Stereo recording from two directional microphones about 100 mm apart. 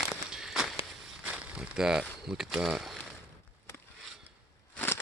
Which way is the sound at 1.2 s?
10° right (ahead or behind).